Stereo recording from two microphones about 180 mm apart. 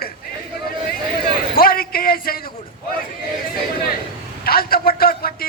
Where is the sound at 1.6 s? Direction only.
55° left (ahead or behind).